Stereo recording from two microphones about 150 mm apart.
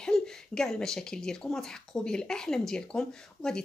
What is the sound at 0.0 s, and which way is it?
Speech, 5° left (ahead or behind).